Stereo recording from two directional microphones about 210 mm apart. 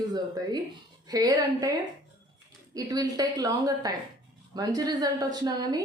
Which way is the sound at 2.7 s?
15° right (ahead or behind).